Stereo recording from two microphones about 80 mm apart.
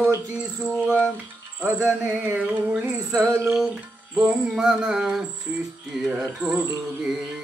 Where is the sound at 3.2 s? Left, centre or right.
Right.